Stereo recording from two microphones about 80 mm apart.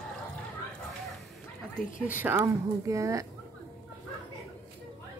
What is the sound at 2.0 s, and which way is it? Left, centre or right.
Speech, right.